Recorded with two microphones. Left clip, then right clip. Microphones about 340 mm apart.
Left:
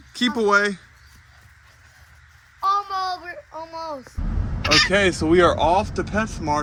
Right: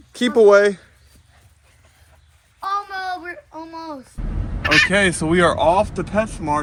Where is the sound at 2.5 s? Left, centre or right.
Left.